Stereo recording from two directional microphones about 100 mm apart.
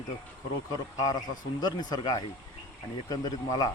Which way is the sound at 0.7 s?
35° left (ahead or behind).